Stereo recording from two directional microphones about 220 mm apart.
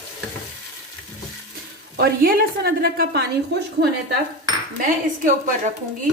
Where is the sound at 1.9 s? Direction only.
45° right (ahead or behind).